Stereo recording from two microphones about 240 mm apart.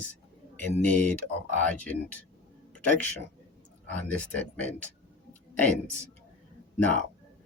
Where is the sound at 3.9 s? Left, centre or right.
Centre.